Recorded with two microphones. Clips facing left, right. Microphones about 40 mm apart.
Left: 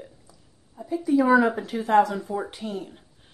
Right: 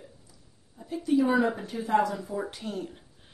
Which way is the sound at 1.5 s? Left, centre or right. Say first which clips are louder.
Left 6 dB; left.